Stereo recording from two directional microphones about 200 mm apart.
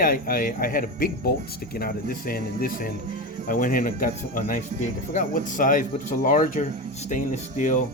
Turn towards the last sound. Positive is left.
turn(degrees=40)  # may be behind; listen again after turning